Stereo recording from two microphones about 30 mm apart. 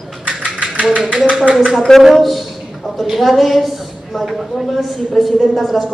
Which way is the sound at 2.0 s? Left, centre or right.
Centre.